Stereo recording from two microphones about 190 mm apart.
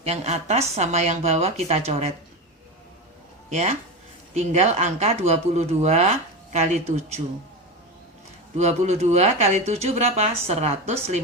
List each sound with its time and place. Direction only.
0.0 s speech: 35° right (ahead or behind)
3.5 s speech: 35° right (ahead or behind)
8.5 s speech: 35° right (ahead or behind)